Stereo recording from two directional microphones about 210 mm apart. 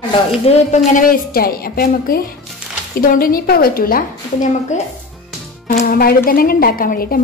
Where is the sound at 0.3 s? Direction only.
30° left (ahead or behind).